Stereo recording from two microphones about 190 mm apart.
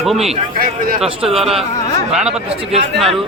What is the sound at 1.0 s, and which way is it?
A man's voice, centre (ahead or behind).